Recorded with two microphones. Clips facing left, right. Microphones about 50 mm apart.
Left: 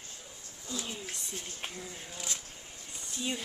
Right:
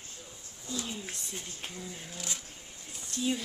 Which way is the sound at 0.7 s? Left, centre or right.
Centre.